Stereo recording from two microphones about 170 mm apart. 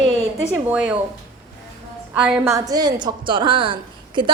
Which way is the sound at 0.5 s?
10° right (ahead or behind).